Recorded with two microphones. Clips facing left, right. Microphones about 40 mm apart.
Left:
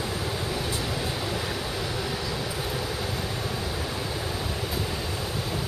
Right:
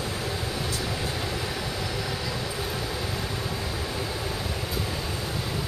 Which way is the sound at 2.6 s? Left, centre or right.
Centre.